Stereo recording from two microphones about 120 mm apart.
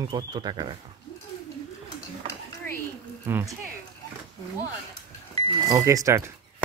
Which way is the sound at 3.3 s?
20° right (ahead or behind).